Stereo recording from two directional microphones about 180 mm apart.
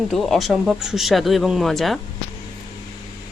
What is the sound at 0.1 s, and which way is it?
Speech, centre (ahead or behind).